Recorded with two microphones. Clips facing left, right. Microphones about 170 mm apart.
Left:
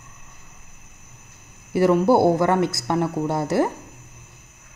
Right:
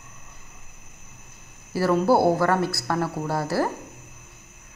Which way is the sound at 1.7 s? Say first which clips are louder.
Left 3 dB; 20° left (ahead or behind).